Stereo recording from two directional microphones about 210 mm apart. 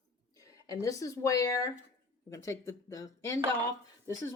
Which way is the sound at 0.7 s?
15° left (ahead or behind).